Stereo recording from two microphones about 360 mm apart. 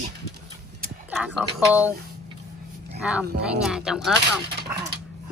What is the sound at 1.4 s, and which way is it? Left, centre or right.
Speech, centre.